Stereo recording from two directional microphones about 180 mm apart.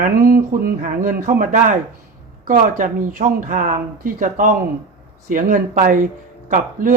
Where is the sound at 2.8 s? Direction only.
50° right (ahead or behind).